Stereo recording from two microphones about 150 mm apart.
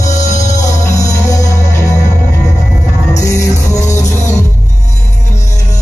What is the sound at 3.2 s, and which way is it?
Music, 20° left (ahead or behind).